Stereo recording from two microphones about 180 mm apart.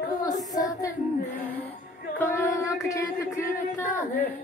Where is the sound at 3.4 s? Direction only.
50° left (ahead or behind).